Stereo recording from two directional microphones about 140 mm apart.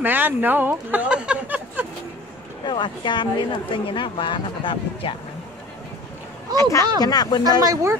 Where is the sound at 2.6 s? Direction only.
35° left (ahead or behind).